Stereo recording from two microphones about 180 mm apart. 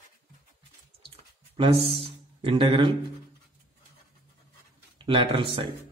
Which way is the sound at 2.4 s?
30° right (ahead or behind).